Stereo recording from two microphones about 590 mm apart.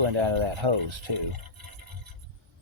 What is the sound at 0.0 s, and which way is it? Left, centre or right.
Speech, right.